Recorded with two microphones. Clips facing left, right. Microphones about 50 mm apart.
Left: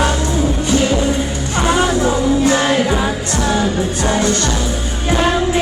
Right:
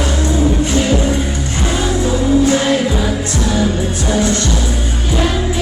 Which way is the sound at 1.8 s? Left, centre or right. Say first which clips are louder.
Left 1 dB; left.